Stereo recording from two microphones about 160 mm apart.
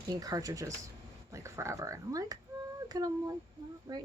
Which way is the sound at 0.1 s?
20° right (ahead or behind).